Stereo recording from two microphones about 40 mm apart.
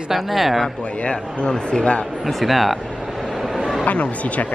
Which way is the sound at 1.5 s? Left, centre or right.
Left.